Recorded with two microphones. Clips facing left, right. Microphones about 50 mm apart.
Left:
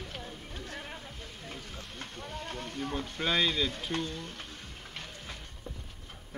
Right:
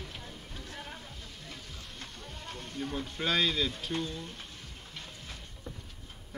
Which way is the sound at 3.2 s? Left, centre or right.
Centre.